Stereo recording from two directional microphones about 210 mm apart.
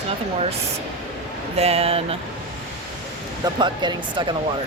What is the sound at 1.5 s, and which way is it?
Speech, 30° right (ahead or behind).